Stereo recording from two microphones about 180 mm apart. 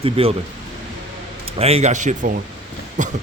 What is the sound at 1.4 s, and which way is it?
Speech, 35° right (ahead or behind).